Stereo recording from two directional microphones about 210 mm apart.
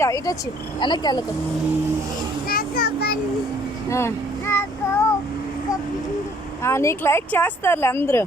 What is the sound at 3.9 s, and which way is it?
Child singing, 10° left (ahead or behind).